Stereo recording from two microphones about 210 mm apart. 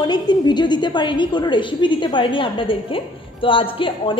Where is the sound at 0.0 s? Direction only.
20° left (ahead or behind).